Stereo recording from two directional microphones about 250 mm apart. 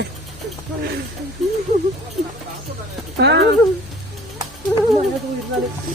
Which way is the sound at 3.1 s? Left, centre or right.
Right.